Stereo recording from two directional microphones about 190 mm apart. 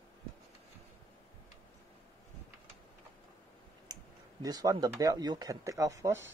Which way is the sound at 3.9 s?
20° right (ahead or behind).